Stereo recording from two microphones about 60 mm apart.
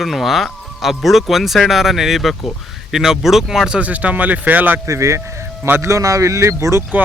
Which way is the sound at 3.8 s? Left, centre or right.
Right.